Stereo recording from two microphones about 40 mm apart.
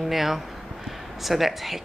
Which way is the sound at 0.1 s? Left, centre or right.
Centre.